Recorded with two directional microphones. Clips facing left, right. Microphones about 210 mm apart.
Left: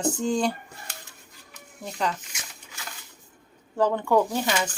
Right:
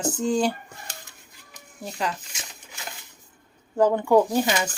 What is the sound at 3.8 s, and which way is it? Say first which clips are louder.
Speech: right 3 dB; 10° right (ahead or behind).